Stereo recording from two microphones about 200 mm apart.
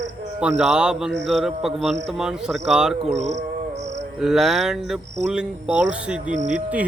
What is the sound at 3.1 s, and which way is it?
Insect, 35° right (ahead or behind).